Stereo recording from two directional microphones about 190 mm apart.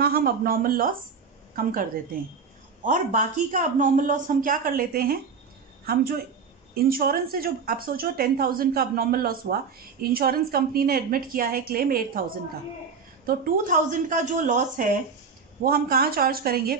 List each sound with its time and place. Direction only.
0.0 s a woman's voice: 50° right (ahead or behind)
6.7 s a woman's voice: 50° right (ahead or behind)
13.3 s a woman's voice: 45° right (ahead or behind)